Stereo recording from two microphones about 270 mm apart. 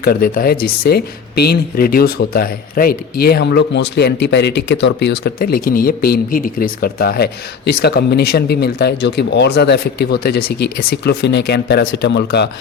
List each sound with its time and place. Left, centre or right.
0.0 s speech: left